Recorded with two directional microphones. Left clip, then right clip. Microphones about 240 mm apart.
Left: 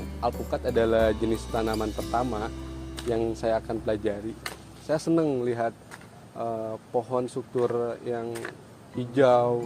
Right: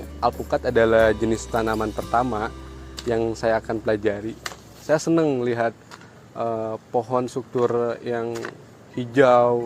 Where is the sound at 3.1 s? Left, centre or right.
Right.